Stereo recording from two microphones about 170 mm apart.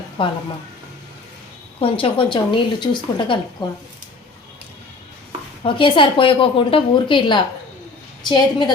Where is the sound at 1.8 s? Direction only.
30° left (ahead or behind).